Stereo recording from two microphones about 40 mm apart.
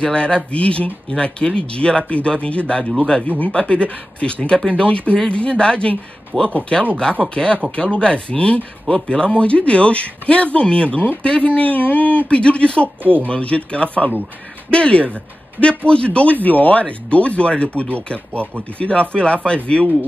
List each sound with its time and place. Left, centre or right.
0.0 s speech: left
6.3 s speech: right
7.0 s speech: left
12.3 s speech: left
12.8 s speech: right
13.3 s speech: left
16.4 s speech: left